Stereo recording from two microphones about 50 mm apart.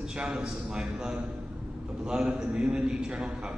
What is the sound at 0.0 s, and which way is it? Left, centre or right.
A man's voice, centre.